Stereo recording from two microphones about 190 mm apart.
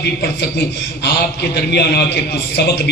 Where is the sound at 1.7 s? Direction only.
60° left (ahead or behind).